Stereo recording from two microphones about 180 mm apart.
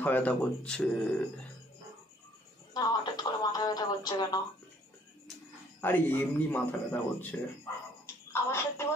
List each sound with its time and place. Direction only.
0.0 s a man's voice: 10° left (ahead or behind)
2.7 s speech: 20° left (ahead or behind)
5.8 s a man's voice: 10° left (ahead or behind)